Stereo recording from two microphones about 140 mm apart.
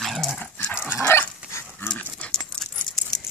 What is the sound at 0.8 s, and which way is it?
Dog, 15° left (ahead or behind).